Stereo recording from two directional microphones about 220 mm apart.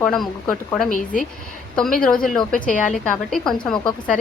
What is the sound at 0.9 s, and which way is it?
Speech, 40° left (ahead or behind).